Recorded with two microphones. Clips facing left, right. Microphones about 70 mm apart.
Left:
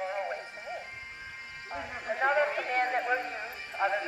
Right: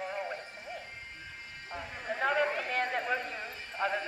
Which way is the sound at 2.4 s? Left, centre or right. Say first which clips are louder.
Left 3 dB; centre.